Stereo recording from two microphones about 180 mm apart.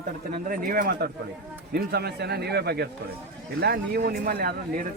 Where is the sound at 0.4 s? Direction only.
50° right (ahead or behind).